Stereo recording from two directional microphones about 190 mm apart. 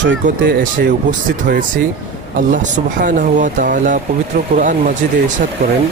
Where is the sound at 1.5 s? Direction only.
45° right (ahead or behind).